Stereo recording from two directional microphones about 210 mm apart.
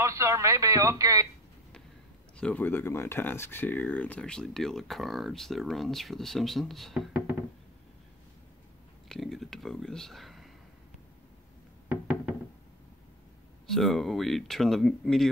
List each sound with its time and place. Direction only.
0.0 s a man's voice: 15° right (ahead or behind)
2.3 s speech: 5° left (ahead or behind)
9.1 s a sound: centre (ahead or behind)
11.9 s knock: 5° right (ahead or behind)
13.7 s speech: centre (ahead or behind)